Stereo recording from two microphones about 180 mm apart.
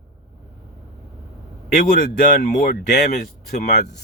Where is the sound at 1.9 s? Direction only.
50° left (ahead or behind).